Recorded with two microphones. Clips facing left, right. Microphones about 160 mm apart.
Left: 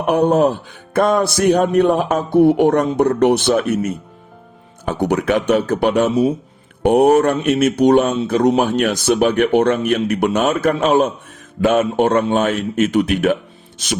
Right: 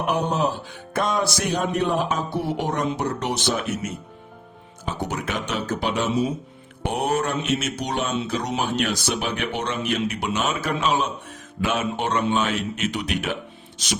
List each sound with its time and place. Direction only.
0.1 s speech: 55° left (ahead or behind)